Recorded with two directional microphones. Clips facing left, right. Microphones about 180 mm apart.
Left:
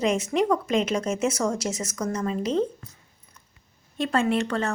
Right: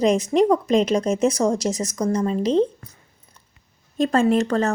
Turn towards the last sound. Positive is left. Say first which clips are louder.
# right 6 dB
turn(degrees=-40)  # may be behind; listen again after turning